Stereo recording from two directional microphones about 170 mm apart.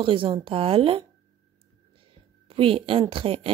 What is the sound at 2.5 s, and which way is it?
Speech, 30° right (ahead or behind).